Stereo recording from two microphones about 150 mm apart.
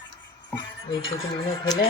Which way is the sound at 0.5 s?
35° left (ahead or behind).